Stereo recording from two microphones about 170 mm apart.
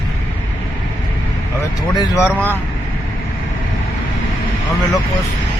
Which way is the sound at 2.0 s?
15° left (ahead or behind).